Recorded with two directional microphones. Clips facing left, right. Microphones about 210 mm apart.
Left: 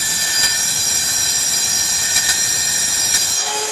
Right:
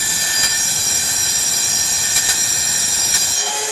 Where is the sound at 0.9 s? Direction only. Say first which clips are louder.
Right 1 dB; centre (ahead or behind).